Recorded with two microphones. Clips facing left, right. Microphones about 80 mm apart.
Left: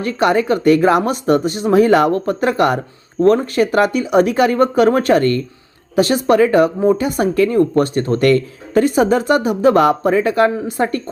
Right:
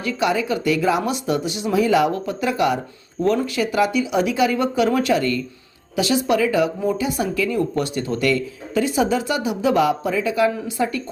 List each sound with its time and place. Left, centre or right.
0.0 s speech: left